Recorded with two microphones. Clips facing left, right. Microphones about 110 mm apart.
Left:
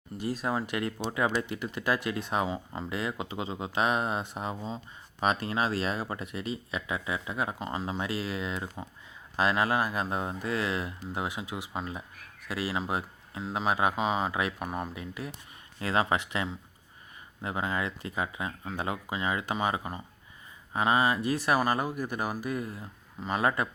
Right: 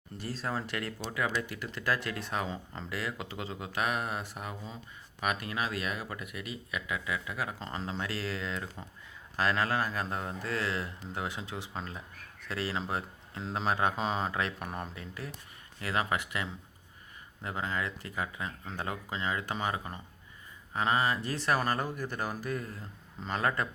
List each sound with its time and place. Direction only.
0.2 s speech: 15° left (ahead or behind)
15.8 s speech: 25° left (ahead or behind)